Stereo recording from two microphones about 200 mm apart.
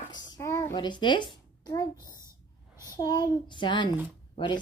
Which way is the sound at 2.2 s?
15° right (ahead or behind).